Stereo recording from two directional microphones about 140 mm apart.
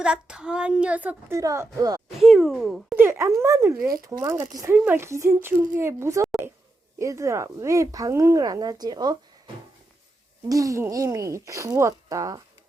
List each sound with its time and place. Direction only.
0.0 s a woman's voice: 5° right (ahead or behind)
1.4 s speech: 20° right (ahead or behind)
2.0 s speech: centre (ahead or behind)
3.0 s speech: 20° right (ahead or behind)
10.5 s speech: 25° right (ahead or behind)